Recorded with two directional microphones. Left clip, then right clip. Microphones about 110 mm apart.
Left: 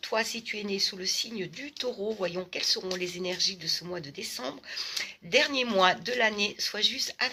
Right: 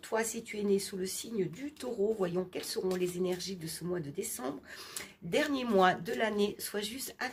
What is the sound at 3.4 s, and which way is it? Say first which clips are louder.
Speech: left 12 dB; 45° right (ahead or behind).